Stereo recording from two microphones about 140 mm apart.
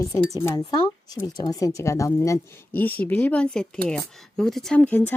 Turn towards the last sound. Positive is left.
turn(degrees=10)  # may be behind; listen again after turning